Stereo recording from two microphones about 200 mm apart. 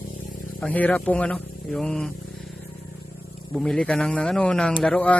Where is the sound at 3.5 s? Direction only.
5° left (ahead or behind).